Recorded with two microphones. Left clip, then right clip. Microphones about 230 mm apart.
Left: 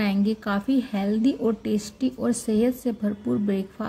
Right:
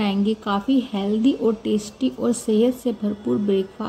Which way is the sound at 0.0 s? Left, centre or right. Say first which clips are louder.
Right 3 dB; left.